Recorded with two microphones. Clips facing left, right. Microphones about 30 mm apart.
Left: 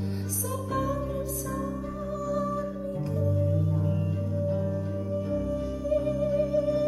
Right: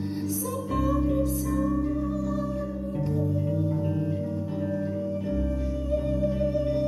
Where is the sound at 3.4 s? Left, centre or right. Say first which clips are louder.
Right 1 dB; right.